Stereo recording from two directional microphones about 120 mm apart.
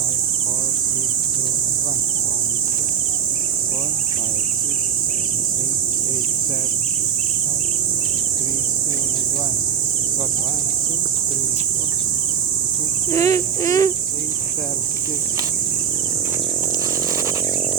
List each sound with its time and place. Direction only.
13.1 s cricket: 25° left (ahead or behind)